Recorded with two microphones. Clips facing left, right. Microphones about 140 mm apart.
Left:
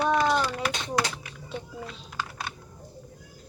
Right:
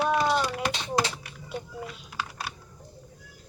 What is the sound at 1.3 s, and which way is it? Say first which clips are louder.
Typing: even; 5° right (ahead or behind).